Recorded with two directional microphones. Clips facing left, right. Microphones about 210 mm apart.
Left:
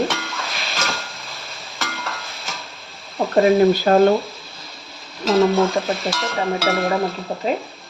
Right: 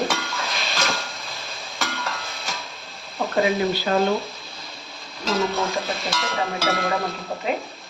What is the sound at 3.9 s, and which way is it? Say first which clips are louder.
Speech: left 5 dB; 50° left (ahead or behind).